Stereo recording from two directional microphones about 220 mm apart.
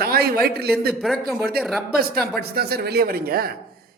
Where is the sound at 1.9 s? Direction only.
45° right (ahead or behind).